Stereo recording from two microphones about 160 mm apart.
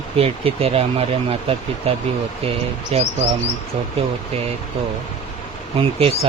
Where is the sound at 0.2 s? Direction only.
35° right (ahead or behind).